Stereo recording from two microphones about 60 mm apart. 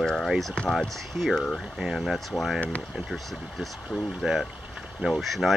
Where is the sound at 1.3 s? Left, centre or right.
Centre.